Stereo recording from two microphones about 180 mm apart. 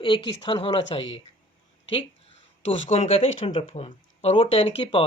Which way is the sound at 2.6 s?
35° left (ahead or behind).